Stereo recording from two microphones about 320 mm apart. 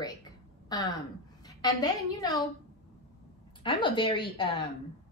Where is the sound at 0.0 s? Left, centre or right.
Centre.